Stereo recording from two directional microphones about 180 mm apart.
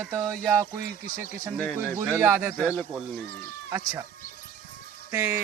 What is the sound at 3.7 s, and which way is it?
Speech, 15° right (ahead or behind).